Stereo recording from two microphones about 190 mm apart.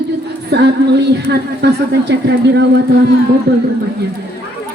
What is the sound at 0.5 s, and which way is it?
A woman's voice, 60° right (ahead or behind).